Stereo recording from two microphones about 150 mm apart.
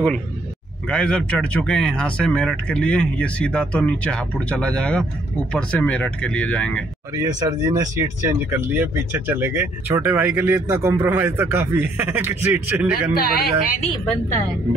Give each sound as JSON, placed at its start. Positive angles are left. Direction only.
{"t": 0.8, "sound": "speech", "side_deg": 5}
{"t": 7.3, "sound": "speech", "side_deg": -25}
{"t": 13.2, "sound": "speech", "side_deg": 75}